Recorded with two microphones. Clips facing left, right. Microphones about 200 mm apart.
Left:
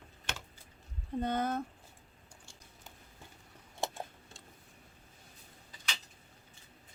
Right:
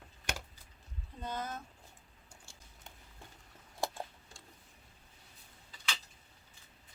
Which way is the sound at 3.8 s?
20° left (ahead or behind).